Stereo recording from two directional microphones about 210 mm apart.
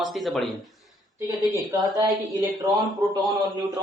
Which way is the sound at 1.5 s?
15° right (ahead or behind).